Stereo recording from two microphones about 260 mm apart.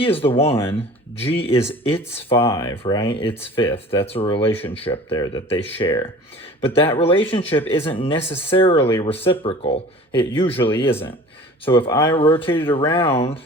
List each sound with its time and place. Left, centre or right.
0.0 s speech: left